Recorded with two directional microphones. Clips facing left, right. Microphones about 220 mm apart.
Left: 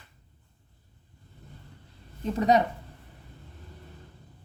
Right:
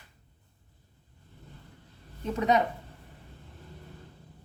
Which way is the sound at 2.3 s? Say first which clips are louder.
Left 3 dB; 35° left (ahead or behind).